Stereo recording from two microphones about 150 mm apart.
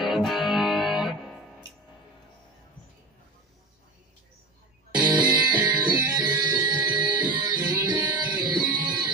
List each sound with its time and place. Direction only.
0.0 s music: centre (ahead or behind)
4.9 s music: 30° right (ahead or behind)